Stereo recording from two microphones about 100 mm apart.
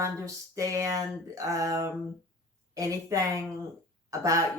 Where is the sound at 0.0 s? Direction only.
30° right (ahead or behind).